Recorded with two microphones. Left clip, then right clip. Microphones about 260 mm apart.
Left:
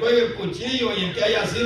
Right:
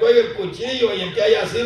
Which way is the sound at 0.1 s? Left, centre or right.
Right.